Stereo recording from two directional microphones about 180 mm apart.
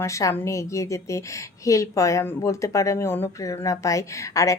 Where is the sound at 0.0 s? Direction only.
15° left (ahead or behind).